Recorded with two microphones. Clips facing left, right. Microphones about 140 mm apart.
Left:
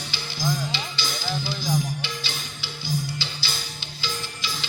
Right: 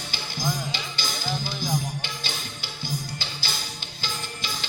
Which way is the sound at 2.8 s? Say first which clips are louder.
Left 4 dB; 50° right (ahead or behind).